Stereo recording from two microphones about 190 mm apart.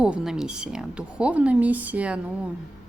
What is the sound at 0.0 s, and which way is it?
A woman's voice, 5° right (ahead or behind).